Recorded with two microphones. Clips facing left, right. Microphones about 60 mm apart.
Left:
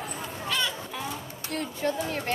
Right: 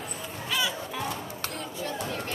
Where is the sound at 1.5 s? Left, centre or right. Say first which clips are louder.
Left 9 dB; left.